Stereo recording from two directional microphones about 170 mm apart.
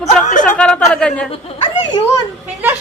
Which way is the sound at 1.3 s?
35° left (ahead or behind).